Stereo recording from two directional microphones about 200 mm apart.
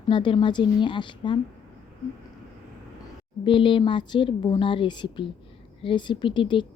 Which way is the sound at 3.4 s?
25° left (ahead or behind).